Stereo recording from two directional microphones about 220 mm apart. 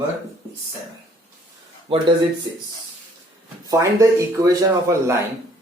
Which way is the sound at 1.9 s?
25° right (ahead or behind).